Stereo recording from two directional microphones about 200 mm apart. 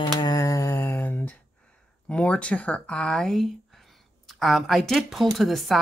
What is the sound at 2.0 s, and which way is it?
Speech, 5° left (ahead or behind).